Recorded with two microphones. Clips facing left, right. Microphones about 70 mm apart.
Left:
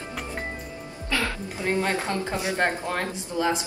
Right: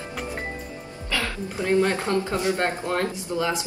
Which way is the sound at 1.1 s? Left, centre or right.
Left.